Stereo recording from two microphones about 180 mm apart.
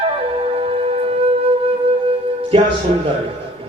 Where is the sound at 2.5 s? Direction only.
30° right (ahead or behind).